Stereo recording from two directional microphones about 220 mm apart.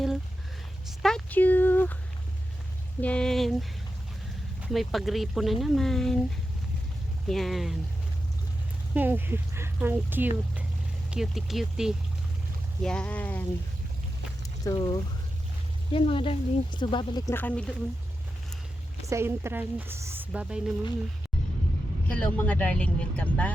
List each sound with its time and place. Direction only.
1.0 s a sound: 5° left (ahead or behind)
3.0 s speech: 5° left (ahead or behind)
7.3 s speech: centre (ahead or behind)
9.0 s speech: 10° right (ahead or behind); by 13.4 s 5° left (ahead or behind)
14.6 s speech: 20° left (ahead or behind)
19.0 s speech: 10° right (ahead or behind)
22.0 s speech: 5° left (ahead or behind)